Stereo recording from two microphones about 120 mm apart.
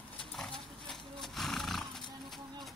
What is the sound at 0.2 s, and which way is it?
Horse, 5° left (ahead or behind).